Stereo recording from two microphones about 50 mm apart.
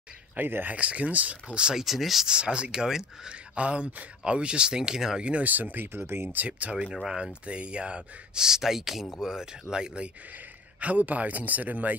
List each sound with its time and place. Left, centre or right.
0.4 s speech: right
0.7 s speech: right; by 2.2 s centre
2.2 s speech: centre
5.5 s speech: right
5.9 s speech: right
6.3 s speech: right
6.9 s speech: centre
7.4 s speech: right
8.5 s speech: centre
10.8 s speech: right